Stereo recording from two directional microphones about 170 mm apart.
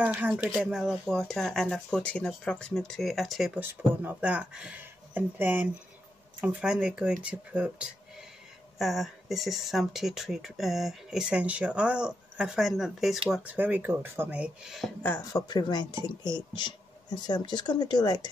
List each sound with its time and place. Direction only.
0.0 s speech: 10° right (ahead or behind)
15.0 s speech: 15° left (ahead or behind)
15.4 s speech: 25° left (ahead or behind)